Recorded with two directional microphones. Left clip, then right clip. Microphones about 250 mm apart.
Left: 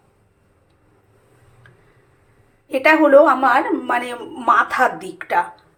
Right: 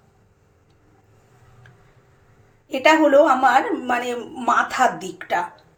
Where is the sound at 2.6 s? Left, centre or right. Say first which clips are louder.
Left 2 dB; centre.